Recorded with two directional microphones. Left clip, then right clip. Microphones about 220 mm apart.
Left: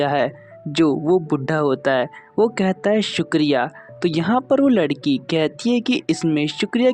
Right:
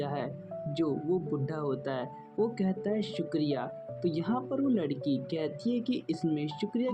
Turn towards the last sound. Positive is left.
turn(degrees=45)  # may be behind; listen again after turning